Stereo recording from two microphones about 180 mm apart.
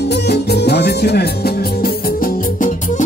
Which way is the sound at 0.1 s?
65° left (ahead or behind).